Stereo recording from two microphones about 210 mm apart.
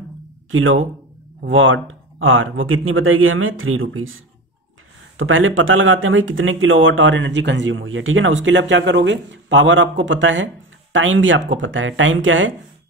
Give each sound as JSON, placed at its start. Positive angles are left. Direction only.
{"t": 0.5, "sound": "speech", "side_deg": -70}